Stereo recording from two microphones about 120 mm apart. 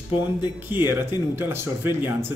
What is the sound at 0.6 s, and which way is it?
A man's voice, 20° right (ahead or behind).